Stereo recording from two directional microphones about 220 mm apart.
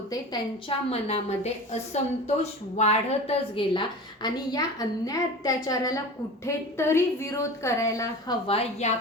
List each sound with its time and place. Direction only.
0.9 s a woman's voice: 30° left (ahead or behind)
8.4 s a woman's voice: 25° left (ahead or behind)